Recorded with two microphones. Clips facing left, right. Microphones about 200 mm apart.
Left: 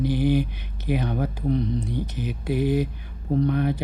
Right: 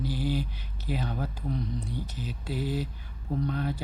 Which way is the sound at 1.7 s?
20° left (ahead or behind).